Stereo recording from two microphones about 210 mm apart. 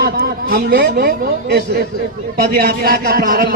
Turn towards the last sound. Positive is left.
turn(degrees=-45)  # may be behind; listen again after turning